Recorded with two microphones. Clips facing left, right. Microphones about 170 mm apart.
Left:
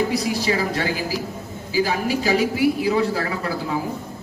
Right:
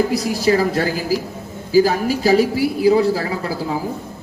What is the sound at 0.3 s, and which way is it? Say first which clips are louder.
Speech: right 5 dB; 45° right (ahead or behind).